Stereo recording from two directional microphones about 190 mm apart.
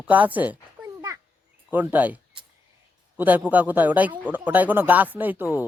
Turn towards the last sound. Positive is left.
turn(degrees=-10)  # may be behind; listen again after turning